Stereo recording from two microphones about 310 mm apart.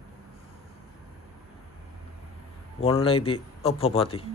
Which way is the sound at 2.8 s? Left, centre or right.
Centre.